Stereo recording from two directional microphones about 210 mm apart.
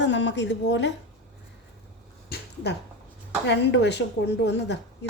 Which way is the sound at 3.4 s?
55° left (ahead or behind).